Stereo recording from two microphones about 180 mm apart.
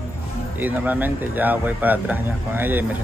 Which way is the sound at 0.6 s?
10° right (ahead or behind).